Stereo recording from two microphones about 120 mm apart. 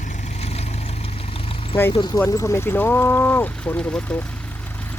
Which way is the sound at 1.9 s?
40° left (ahead or behind).